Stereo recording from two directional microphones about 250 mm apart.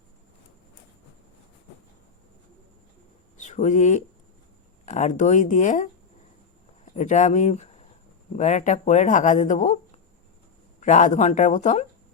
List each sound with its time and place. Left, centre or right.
3.3 s speech: left
6.9 s speech: left